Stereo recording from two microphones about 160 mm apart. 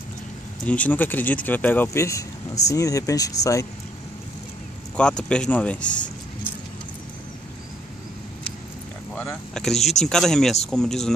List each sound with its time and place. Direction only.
0.7 s speech: 10° left (ahead or behind)
4.9 s speech: 5° left (ahead or behind)
9.1 s a sound: 10° left (ahead or behind)
9.8 s speech: 45° left (ahead or behind)
10.0 s speech: 5° left (ahead or behind)